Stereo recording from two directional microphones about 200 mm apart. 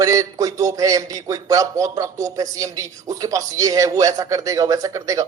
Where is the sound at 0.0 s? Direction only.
15° right (ahead or behind).